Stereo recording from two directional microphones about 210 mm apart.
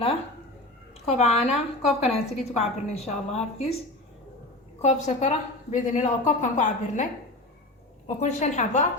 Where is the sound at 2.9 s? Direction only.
30° left (ahead or behind).